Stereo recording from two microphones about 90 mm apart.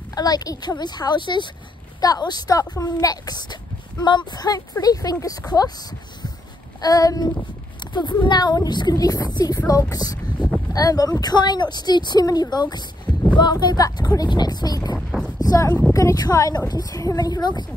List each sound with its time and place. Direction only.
0.1 s a woman's voice: 45° left (ahead or behind)
2.0 s a woman's voice: 45° left (ahead or behind)
7.8 s a woman's voice: 55° left (ahead or behind)
15.0 s a sound: 5° left (ahead or behind)
15.3 s a sound: 40° left (ahead or behind)
15.9 s a woman's voice: 40° left (ahead or behind); by 17.6 s 55° left (ahead or behind)